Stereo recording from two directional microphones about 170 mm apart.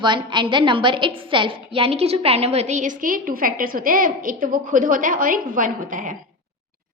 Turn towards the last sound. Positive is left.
turn(degrees=-50)  # may be behind; listen again after turning